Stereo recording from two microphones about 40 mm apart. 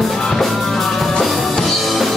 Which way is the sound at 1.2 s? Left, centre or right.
Centre.